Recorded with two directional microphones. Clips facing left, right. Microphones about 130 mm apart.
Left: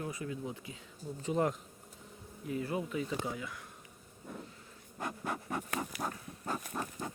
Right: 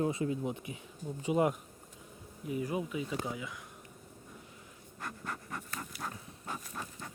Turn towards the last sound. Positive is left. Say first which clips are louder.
# left 6 dB
turn(degrees=25)  # may be behind; listen again after turning